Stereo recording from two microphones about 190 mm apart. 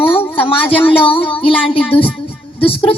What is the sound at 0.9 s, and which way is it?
A woman's voice, 30° left (ahead or behind).